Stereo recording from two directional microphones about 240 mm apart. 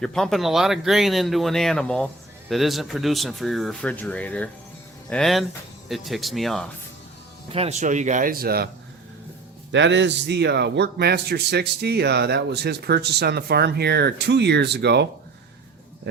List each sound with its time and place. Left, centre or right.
0.0 s speech: centre
7.5 s speech: right
9.7 s a man's voice: right